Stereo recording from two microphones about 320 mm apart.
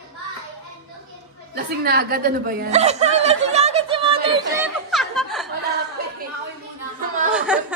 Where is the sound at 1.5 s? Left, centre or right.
Right.